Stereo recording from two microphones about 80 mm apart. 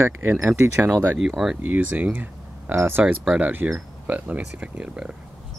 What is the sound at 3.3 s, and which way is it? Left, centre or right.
Speech, centre.